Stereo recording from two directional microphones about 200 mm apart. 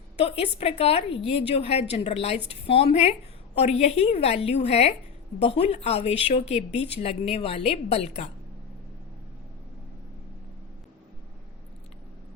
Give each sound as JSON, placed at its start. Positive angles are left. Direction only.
{"t": 0.3, "sound": "a woman's voice", "side_deg": 30}